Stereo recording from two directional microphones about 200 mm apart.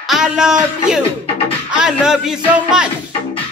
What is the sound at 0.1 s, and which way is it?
Speech, 5° right (ahead or behind).